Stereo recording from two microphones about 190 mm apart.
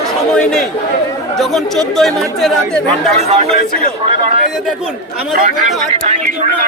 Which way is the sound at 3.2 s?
35° right (ahead or behind).